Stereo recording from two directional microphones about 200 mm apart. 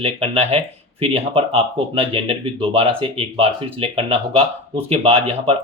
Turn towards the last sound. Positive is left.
turn(degrees=-30)  # may be behind; listen again after turning